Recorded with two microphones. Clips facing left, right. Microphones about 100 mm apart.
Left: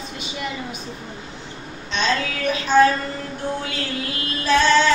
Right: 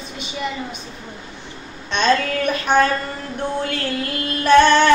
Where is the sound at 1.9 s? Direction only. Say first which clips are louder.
Right 5 dB; 60° right (ahead or behind).